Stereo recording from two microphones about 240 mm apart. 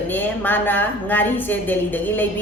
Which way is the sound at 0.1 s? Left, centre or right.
Centre.